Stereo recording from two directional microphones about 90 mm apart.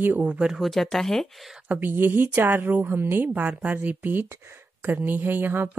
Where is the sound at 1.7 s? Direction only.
25° right (ahead or behind).